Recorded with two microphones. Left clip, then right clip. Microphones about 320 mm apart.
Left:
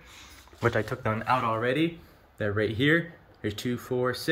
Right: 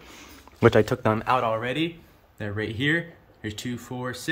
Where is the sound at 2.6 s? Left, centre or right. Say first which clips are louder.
Left 1 dB; right.